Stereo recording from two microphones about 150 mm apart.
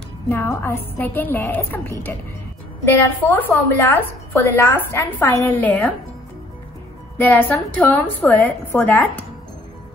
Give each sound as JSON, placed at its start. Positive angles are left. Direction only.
{"t": 0.3, "sound": "a woman's voice", "side_deg": 15}
{"t": 7.2, "sound": "a woman's voice", "side_deg": 10}